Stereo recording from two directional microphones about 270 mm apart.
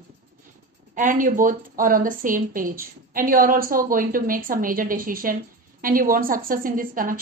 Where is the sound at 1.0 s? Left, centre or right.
Right.